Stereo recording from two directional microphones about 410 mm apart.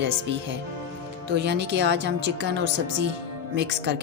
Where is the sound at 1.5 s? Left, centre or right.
Right.